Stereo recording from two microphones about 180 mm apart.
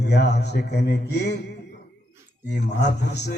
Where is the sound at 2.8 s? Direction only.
70° left (ahead or behind).